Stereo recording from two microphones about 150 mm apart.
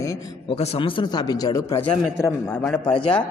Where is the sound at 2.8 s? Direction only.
35° left (ahead or behind).